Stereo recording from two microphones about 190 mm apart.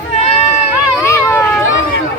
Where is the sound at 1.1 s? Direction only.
15° left (ahead or behind).